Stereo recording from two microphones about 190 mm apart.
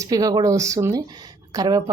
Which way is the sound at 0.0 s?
20° right (ahead or behind).